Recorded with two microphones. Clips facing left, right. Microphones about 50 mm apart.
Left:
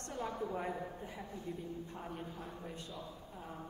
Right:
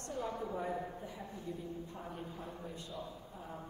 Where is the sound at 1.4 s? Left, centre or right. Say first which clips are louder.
Right 1 dB; left.